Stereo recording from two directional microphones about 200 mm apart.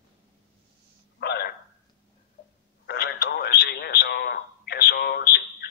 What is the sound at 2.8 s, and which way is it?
Radio, 50° left (ahead or behind).